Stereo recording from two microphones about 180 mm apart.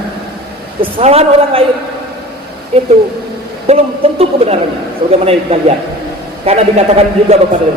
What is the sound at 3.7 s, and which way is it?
Speech, 35° right (ahead or behind).